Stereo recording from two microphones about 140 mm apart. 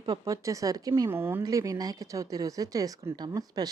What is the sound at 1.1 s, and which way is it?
A woman's voice, 15° right (ahead or behind).